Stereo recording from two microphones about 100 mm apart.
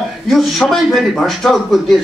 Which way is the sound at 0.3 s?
Centre (ahead or behind).